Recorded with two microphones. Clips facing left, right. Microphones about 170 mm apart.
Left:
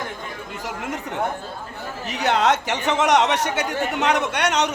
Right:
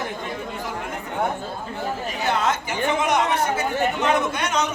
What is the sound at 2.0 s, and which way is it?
Speech, 75° left (ahead or behind).